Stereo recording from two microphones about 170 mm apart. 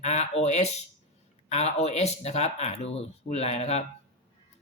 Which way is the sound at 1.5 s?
40° left (ahead or behind).